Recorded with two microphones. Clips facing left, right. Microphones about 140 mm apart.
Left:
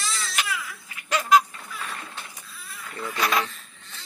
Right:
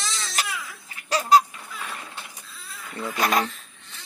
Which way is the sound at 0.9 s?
35° right (ahead or behind).